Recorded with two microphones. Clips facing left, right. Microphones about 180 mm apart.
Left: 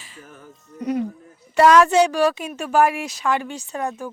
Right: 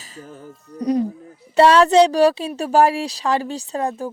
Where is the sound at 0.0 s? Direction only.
40° right (ahead or behind).